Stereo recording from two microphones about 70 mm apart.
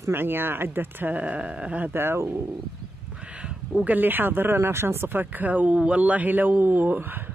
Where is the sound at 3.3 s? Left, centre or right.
Centre.